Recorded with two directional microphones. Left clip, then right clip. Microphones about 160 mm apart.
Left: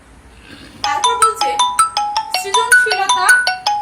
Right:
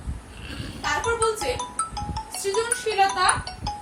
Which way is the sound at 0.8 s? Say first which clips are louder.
Left 10 dB; 40° left (ahead or behind).